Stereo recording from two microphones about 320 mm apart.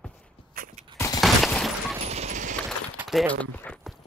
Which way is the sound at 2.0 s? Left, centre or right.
Centre.